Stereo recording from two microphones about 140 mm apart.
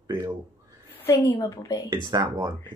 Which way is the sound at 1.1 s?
25° left (ahead or behind).